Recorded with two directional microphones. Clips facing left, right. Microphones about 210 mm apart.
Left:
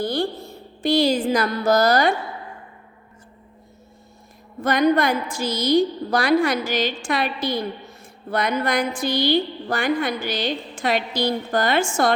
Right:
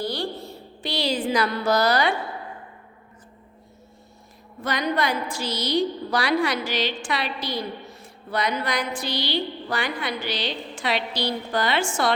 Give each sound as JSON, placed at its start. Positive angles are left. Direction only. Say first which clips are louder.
{"t": 0.0, "sound": "a woman's voice", "louder": "left 5 dB", "side_deg": 50}
{"t": 4.6, "sound": "a woman's voice", "louder": "left 7 dB", "side_deg": 50}